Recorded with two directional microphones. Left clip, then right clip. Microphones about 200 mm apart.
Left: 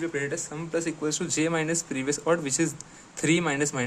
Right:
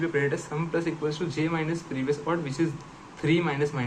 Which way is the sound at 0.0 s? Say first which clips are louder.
Right 3 dB; 30° left (ahead or behind).